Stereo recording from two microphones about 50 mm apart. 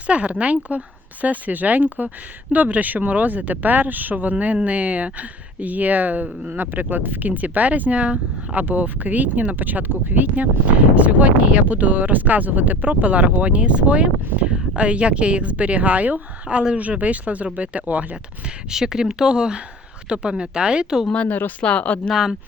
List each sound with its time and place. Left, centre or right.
0.1 s a woman's voice: right
18.7 s a woman's voice: centre
21.2 s speech: left
21.6 s speech: left
22.1 s speech: centre